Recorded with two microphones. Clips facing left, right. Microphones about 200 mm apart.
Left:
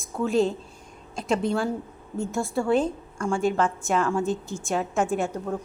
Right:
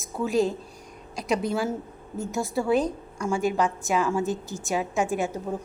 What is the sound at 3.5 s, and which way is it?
Speech, 15° right (ahead or behind).